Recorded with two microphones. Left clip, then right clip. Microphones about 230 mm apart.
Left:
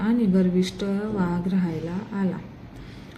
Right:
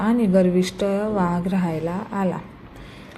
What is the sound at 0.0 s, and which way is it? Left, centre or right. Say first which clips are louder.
A woman's voice: right 5 dB; centre.